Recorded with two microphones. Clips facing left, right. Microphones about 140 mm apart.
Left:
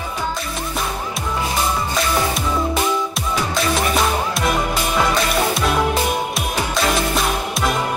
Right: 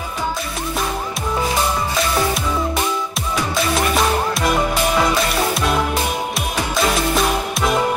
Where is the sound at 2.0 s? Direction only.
Centre (ahead or behind).